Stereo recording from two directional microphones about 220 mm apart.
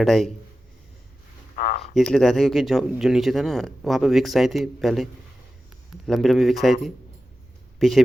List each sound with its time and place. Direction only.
0.0 s speech: centre (ahead or behind)
1.5 s a sound: 45° left (ahead or behind)
2.0 s speech: centre (ahead or behind)
6.1 s speech: centre (ahead or behind)
7.8 s speech: centre (ahead or behind)